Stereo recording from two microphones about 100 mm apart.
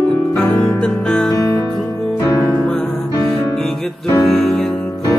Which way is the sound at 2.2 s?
25° left (ahead or behind).